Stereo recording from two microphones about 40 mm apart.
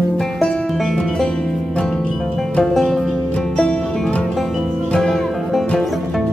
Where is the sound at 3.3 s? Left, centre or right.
Left.